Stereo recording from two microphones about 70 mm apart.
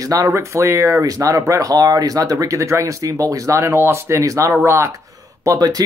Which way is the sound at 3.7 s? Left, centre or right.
Right.